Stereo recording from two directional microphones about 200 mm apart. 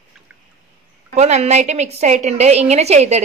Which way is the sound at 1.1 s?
35° right (ahead or behind).